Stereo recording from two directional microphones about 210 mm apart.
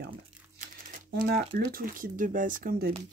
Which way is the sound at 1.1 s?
45° right (ahead or behind).